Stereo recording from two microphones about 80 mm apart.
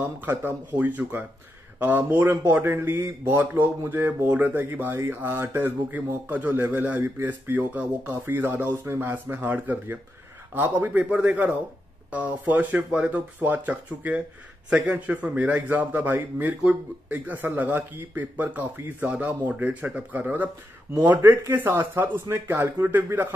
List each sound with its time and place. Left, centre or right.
0.0 s speech: right